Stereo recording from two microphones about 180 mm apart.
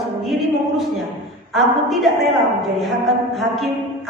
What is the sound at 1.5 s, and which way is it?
Speech, centre (ahead or behind).